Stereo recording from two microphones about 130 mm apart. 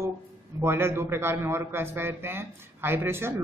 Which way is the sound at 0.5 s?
20° right (ahead or behind).